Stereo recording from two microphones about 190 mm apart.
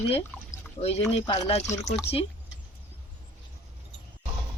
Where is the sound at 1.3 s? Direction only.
25° left (ahead or behind).